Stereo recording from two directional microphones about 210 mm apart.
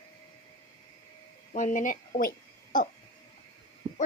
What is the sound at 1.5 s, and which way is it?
A woman's voice, 35° left (ahead or behind).